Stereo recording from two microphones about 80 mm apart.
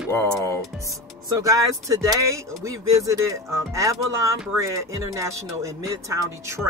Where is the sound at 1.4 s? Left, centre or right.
Right.